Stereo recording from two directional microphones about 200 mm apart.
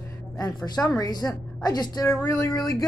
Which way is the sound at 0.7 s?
20° left (ahead or behind).